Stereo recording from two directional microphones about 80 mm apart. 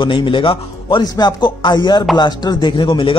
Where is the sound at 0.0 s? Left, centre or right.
Left.